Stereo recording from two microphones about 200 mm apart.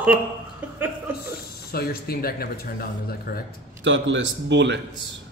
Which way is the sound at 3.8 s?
65° right (ahead or behind).